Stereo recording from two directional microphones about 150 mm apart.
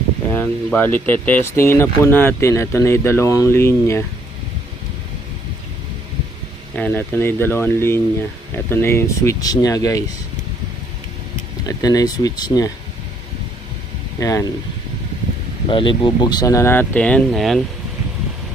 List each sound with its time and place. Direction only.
0.3 s speech: 10° left (ahead or behind)
6.7 s speech: 15° left (ahead or behind)
11.8 s speech: 25° left (ahead or behind)
14.2 s speech: 20° left (ahead or behind)
15.7 s speech: 35° left (ahead or behind); by 17.6 s centre (ahead or behind)